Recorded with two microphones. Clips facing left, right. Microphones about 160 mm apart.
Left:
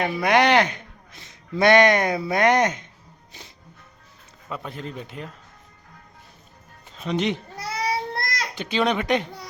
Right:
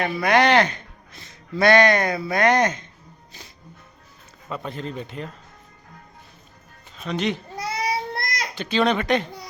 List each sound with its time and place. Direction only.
0.0 s speech: 20° left (ahead or behind)
4.4 s a man's voice: 5° left (ahead or behind)
7.0 s a child's voice: 20° left (ahead or behind)
7.5 s child singing: 15° right (ahead or behind)
8.5 s speech: 15° left (ahead or behind)